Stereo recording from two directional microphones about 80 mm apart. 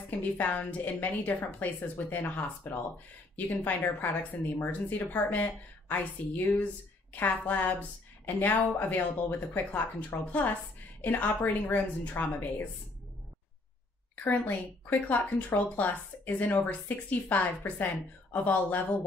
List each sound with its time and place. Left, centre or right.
0.4 s speech: left
14.1 s speech: left